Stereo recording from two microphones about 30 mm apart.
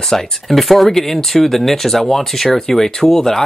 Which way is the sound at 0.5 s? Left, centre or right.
Centre.